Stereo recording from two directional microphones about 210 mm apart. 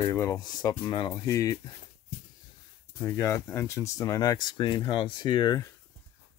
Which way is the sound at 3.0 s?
15° left (ahead or behind).